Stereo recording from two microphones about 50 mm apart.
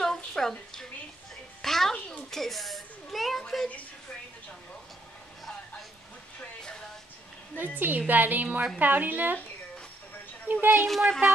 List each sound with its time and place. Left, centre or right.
0.0 s a sound: centre
2.3 s a woman's voice: centre
7.5 s a woman's voice: right
10.5 s a woman's voice: right
10.8 s speech: centre